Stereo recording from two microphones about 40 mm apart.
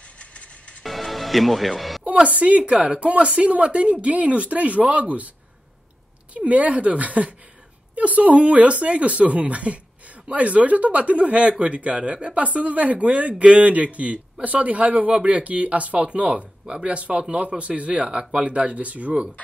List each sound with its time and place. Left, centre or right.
0.2 s music: left
0.8 s music: centre
2.2 s a woman's voice: right
6.3 s a woman's voice: right